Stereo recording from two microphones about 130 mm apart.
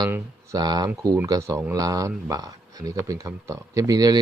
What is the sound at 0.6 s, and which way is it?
Speech, 30° right (ahead or behind).